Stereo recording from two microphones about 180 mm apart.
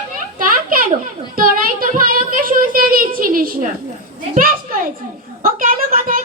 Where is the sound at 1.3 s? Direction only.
50° right (ahead or behind).